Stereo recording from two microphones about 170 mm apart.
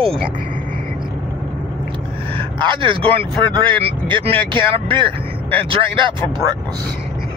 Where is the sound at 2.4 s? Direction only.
30° right (ahead or behind).